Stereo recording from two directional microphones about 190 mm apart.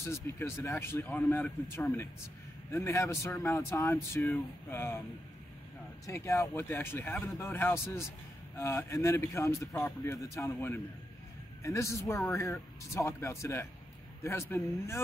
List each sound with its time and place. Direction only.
0.0 s a man's voice: 15° left (ahead or behind)
1.0 s a man's voice: centre (ahead or behind)
6.0 s a man's voice: 15° left (ahead or behind)